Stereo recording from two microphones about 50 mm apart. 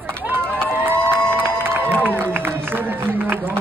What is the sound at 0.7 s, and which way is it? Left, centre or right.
Crowd, right.